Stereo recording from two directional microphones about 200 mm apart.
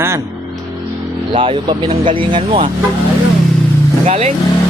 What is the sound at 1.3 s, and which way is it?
Speech, 25° right (ahead or behind).